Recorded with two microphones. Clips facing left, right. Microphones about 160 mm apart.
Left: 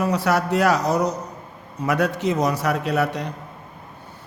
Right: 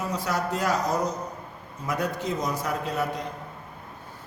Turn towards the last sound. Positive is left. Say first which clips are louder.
# left 6 dB
turn(degrees=75)  # may be behind; listen again after turning